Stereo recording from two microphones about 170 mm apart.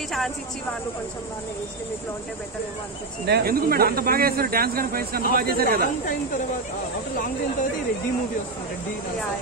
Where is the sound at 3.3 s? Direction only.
70° right (ahead or behind).